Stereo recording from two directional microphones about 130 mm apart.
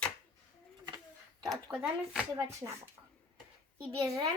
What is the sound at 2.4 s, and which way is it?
Speech, 20° right (ahead or behind).